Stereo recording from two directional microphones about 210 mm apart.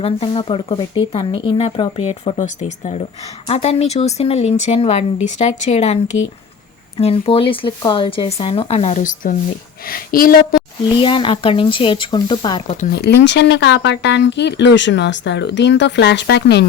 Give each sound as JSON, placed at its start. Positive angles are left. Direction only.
{"t": 0.0, "sound": "speech", "side_deg": 25}
{"t": 10.8, "sound": "speech", "side_deg": 25}
{"t": 12.9, "sound": "speech", "side_deg": 50}